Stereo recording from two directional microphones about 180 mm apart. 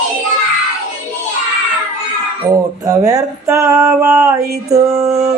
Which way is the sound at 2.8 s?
20° right (ahead or behind).